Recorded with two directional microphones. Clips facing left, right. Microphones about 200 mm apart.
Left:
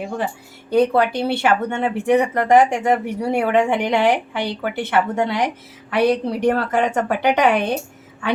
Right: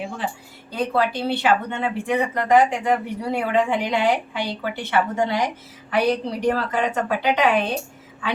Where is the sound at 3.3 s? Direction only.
70° left (ahead or behind).